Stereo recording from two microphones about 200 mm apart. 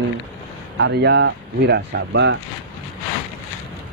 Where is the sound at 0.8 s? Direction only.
55° right (ahead or behind).